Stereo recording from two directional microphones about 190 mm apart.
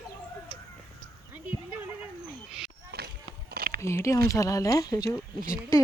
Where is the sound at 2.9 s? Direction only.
60° right (ahead or behind).